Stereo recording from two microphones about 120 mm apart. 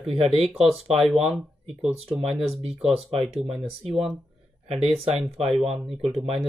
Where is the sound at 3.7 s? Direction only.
55° right (ahead or behind).